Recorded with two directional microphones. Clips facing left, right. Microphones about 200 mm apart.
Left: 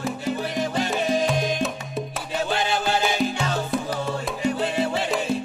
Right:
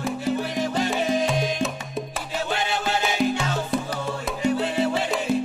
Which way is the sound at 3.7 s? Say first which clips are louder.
Right 2 dB; centre (ahead or behind).